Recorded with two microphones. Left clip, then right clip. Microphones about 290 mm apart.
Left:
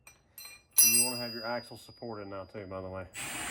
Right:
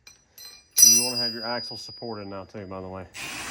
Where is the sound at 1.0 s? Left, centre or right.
Right.